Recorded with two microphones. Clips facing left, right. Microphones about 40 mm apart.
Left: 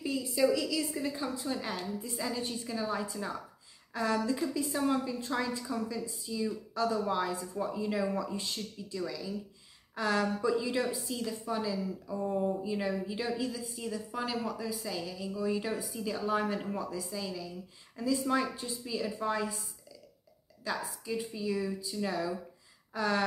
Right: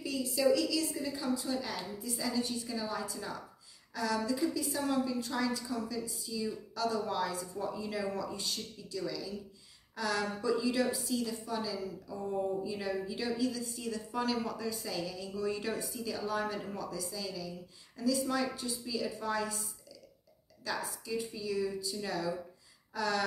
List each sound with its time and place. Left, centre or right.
0.0 s a woman's voice: left
9.9 s a woman's voice: left
13.7 s a woman's voice: centre
20.6 s a woman's voice: centre